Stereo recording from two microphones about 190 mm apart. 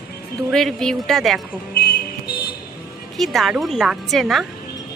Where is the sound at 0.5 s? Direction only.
5° left (ahead or behind).